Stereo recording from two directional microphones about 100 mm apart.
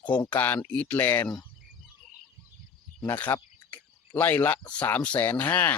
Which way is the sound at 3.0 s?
20° left (ahead or behind).